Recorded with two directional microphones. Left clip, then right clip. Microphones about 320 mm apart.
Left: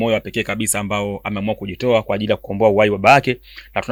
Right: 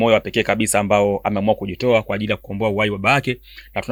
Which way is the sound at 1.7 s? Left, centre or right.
Centre.